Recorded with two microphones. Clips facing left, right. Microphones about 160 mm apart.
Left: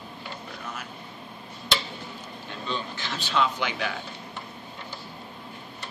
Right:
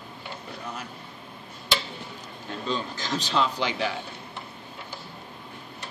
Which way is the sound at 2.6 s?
40° right (ahead or behind).